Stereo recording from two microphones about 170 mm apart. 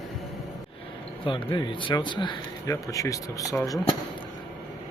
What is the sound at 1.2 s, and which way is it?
Speech, 30° left (ahead or behind).